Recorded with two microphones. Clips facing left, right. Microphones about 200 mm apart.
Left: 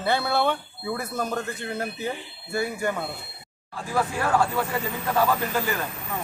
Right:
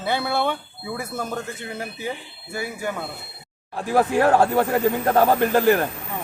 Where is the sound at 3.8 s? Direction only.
65° right (ahead or behind).